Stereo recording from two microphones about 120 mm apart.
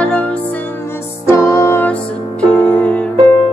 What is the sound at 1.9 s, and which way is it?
Music, 10° left (ahead or behind).